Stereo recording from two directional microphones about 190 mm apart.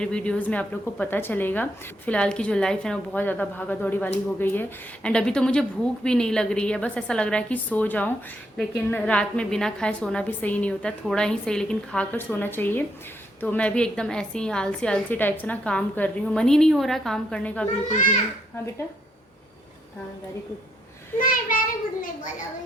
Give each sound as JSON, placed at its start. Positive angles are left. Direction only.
{"t": 0.0, "sound": "a woman's voice", "side_deg": 5}
{"t": 17.8, "sound": "a child's voice", "side_deg": 40}
{"t": 21.2, "sound": "a child's voice", "side_deg": 45}